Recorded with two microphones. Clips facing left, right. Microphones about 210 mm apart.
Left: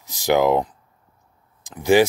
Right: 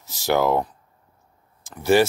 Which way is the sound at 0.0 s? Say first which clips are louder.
Left 3 dB; 15° left (ahead or behind).